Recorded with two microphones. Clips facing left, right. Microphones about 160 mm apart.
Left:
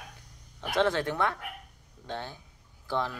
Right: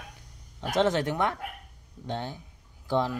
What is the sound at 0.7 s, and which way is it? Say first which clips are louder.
Speech: right 2 dB; 20° right (ahead or behind).